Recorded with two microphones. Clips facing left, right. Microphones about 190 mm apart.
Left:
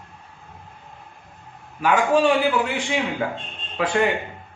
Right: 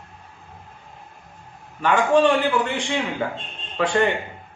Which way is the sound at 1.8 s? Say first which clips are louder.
Right 1 dB; 10° left (ahead or behind).